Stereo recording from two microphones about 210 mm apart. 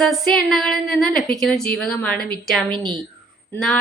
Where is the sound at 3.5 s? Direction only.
5° left (ahead or behind).